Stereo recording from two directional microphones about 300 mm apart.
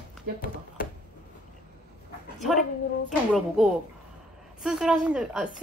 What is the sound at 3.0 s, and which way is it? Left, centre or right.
A woman's voice, centre.